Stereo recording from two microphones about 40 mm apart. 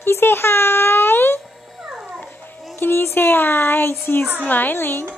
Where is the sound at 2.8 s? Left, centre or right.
Left.